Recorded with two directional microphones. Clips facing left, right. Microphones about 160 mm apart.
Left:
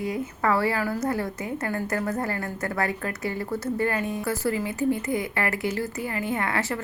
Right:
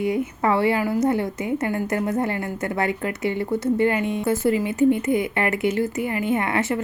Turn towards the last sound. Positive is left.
turn(degrees=-20)  # may be behind; listen again after turning